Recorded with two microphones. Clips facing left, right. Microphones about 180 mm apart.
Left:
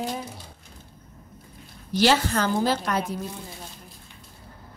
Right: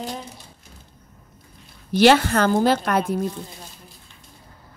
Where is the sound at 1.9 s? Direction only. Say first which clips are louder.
Right 6 dB; 60° right (ahead or behind).